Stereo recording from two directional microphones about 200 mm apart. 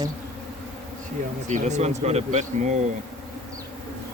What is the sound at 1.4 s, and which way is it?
Speech, 35° right (ahead or behind).